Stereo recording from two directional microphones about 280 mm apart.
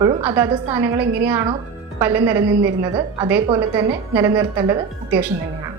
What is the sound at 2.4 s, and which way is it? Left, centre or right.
Speech, right.